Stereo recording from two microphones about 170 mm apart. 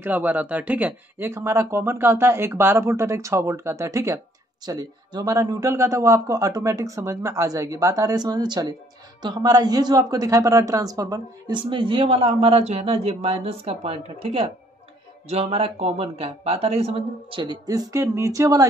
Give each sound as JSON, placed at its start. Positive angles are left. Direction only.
{"t": 0.0, "sound": "speech", "side_deg": -10}